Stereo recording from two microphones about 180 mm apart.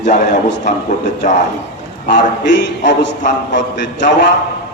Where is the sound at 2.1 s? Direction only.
75° left (ahead or behind).